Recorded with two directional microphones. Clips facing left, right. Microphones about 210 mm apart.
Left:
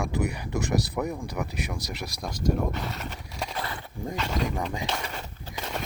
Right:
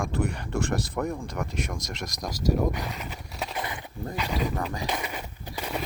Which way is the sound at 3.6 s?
20° right (ahead or behind).